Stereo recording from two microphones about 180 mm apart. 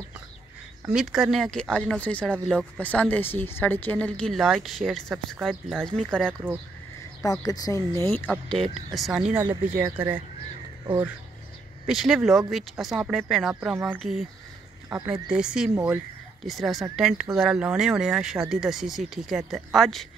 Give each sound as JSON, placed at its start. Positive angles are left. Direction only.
{"t": 0.9, "sound": "speech", "side_deg": -5}
{"t": 7.2, "sound": "speech", "side_deg": 20}
{"t": 11.8, "sound": "speech", "side_deg": 0}
{"t": 15.2, "sound": "speech", "side_deg": -5}